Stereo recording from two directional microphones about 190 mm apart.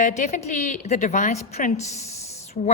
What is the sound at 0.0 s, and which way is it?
A woman's voice, 40° left (ahead or behind).